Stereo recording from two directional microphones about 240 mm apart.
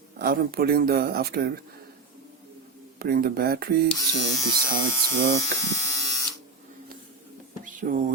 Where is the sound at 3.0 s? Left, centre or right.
Right.